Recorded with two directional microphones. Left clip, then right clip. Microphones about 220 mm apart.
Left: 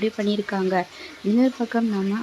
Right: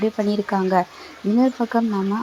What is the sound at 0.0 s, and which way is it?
Speech, centre (ahead or behind).